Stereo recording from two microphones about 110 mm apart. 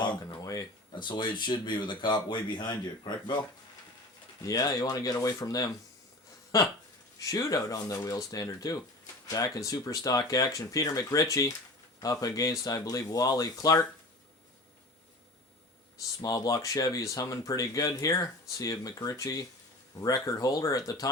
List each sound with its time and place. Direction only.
0.0 s a sound: 40° left (ahead or behind)
1.0 s speech: 45° left (ahead or behind)
4.4 s speech: 35° left (ahead or behind)
16.2 s speech: 35° left (ahead or behind)